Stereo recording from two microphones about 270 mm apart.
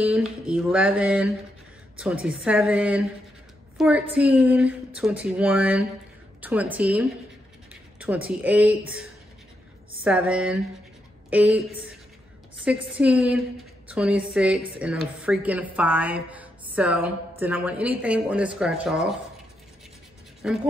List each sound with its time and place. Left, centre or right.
0.0 s a woman's voice: centre
10.0 s a woman's voice: centre
12.6 s a woman's voice: centre
20.4 s a woman's voice: centre